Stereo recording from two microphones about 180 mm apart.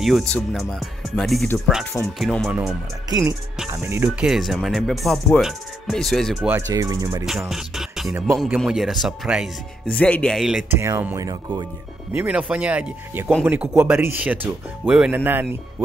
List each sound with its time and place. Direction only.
0.0 s speech: centre (ahead or behind)
3.7 s speech: 15° right (ahead or behind)
6.5 s speech: 20° right (ahead or behind)
7.2 s music: 5° right (ahead or behind)
8.5 s speech: centre (ahead or behind)
10.8 s speech: 15° right (ahead or behind)